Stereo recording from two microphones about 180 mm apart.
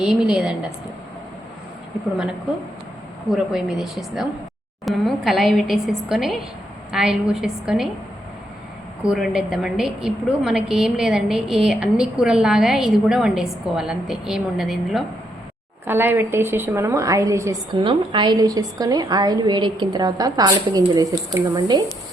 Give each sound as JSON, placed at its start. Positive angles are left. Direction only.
{"t": 0.0, "sound": "a woman's voice", "side_deg": -5}
{"t": 3.3, "sound": "a woman's voice", "side_deg": -5}
{"t": 9.0, "sound": "a woman's voice", "side_deg": -5}